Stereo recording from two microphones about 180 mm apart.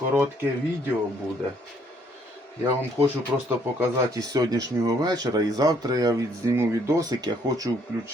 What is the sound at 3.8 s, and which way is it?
Speech, 20° right (ahead or behind).